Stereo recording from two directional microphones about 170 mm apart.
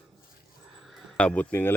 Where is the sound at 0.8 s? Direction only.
Centre (ahead or behind).